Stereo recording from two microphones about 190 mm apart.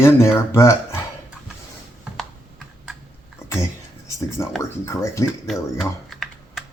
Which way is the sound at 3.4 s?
15° left (ahead or behind).